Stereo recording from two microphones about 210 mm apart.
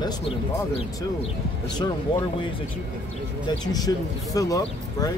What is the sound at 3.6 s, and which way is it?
Speech, 20° left (ahead or behind).